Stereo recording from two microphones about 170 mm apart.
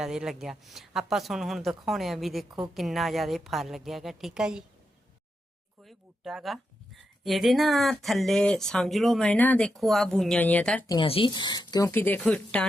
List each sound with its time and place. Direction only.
0.0 s speech: 5° right (ahead or behind)
5.8 s speech: centre (ahead or behind)
10.8 s speech: 30° left (ahead or behind); by 12.6 s 5° left (ahead or behind)